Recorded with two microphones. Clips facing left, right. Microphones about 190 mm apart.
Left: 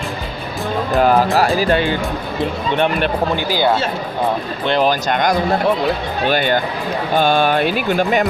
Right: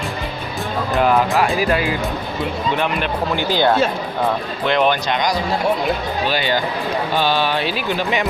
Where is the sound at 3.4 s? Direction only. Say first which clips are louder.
Right 2 dB; 10° left (ahead or behind).